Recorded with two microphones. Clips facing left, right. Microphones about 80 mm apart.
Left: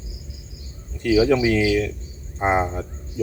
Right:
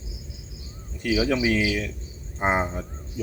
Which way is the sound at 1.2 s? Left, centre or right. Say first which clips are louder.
Left 5 dB; centre.